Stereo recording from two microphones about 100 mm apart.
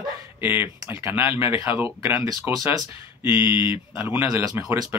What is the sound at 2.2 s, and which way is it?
Speech, 35° right (ahead or behind).